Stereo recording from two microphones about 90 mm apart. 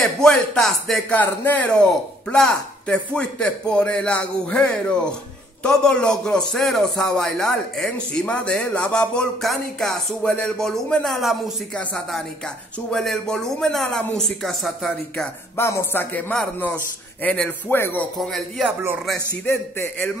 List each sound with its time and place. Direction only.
0.0 s speech: 5° left (ahead or behind)
1.1 s a man's voice: 20° left (ahead or behind); by 11.5 s centre (ahead or behind)
11.7 s a man's voice: 10° left (ahead or behind)
15.5 s a man's voice: 30° left (ahead or behind); by 17.5 s 15° left (ahead or behind)
17.6 s a man's voice: 25° left (ahead or behind)
18.2 s speech: centre (ahead or behind)
19.4 s a man's voice: 25° left (ahead or behind)